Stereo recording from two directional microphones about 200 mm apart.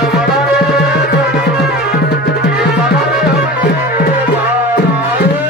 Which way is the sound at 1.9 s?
55° left (ahead or behind).